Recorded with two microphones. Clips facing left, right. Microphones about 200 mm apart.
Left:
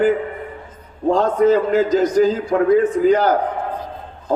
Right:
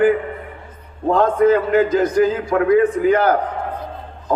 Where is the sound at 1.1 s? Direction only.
55° right (ahead or behind).